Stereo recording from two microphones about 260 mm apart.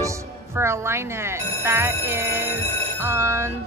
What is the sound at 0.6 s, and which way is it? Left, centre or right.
Speech, centre.